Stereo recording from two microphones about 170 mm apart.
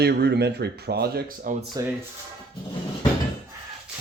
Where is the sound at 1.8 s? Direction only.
20° right (ahead or behind).